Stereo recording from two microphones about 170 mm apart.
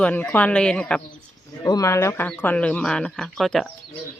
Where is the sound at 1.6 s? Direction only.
20° left (ahead or behind).